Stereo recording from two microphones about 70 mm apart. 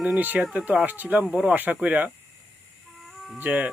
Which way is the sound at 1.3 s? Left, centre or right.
Centre.